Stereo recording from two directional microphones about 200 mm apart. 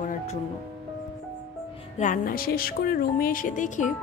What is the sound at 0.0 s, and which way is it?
Music, 40° left (ahead or behind).